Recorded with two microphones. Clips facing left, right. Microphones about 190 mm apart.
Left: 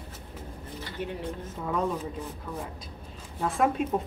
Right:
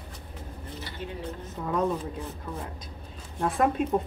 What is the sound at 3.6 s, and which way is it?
Speech, 5° left (ahead or behind).